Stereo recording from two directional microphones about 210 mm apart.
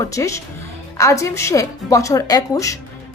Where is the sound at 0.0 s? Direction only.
15° left (ahead or behind).